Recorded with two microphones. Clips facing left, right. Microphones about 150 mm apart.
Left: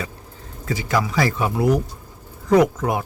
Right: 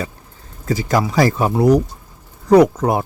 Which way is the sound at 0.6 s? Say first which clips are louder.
Right 4 dB; 40° right (ahead or behind).